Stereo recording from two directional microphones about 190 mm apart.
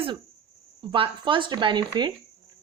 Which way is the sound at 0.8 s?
25° right (ahead or behind).